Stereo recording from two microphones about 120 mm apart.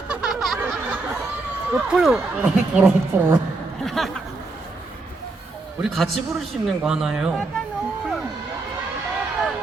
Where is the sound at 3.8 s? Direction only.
Centre (ahead or behind).